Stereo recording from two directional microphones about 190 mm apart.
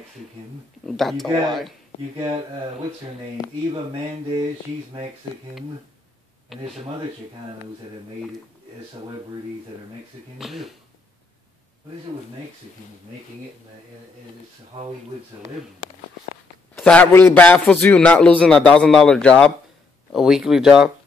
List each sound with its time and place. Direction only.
0.8 s speech: centre (ahead or behind)
3.4 s speech: 20° left (ahead or behind)
6.5 s speech: centre (ahead or behind)
10.4 s speech: centre (ahead or behind)
16.7 s a man's voice: 5° left (ahead or behind)